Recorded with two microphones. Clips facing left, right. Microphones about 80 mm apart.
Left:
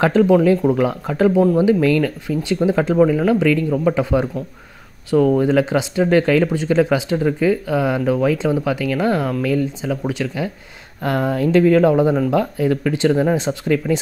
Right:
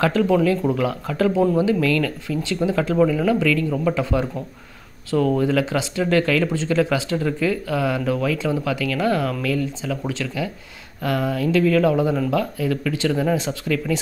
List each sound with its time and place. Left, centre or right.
0.0 s speech: left
5.4 s speech: left
11.0 s speech: left